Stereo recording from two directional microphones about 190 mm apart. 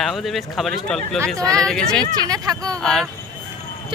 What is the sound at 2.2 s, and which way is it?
Speech, 20° right (ahead or behind).